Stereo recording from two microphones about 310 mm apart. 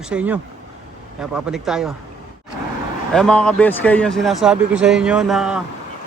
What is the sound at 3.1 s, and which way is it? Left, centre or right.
A man's voice, centre.